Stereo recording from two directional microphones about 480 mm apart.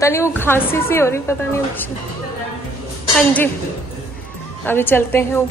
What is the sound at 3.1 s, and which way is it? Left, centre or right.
Speech, centre.